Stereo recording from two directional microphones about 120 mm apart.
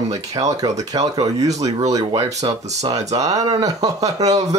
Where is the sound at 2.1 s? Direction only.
60° right (ahead or behind).